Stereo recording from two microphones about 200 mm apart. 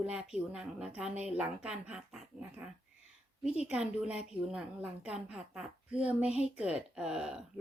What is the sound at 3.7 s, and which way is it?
A woman's voice, 5° right (ahead or behind).